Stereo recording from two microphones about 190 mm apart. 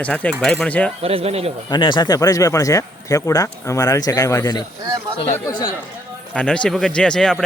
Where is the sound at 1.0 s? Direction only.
30° right (ahead or behind).